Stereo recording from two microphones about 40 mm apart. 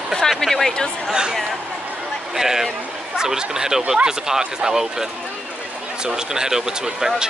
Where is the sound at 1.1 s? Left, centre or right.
Centre.